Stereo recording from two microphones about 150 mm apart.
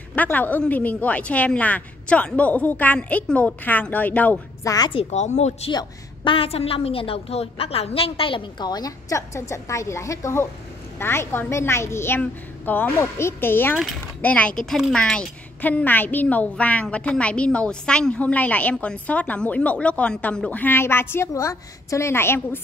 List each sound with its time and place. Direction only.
0.1 s a woman's voice: 10° left (ahead or behind)
4.6 s a woman's voice: 25° left (ahead or behind)
4.9 s speech: 50° left (ahead or behind)
5.7 s a woman's voice: 30° left (ahead or behind); by 22.6 s 15° left (ahead or behind)